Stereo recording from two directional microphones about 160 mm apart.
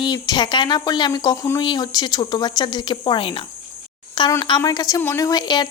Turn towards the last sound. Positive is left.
turn(degrees=25)  # may be behind; listen again after turning